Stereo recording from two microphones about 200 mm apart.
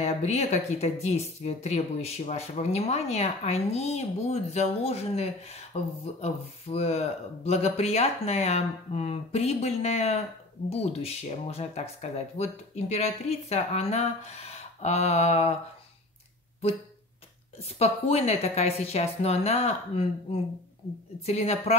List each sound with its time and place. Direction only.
0.0 s speech: 35° left (ahead or behind)
17.6 s speech: 30° left (ahead or behind)
21.3 s speech: 30° left (ahead or behind)